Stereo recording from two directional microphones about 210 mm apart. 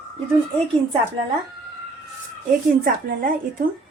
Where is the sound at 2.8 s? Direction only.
40° right (ahead or behind).